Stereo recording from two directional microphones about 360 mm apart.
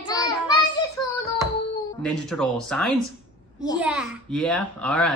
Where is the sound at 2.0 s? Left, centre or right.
Centre.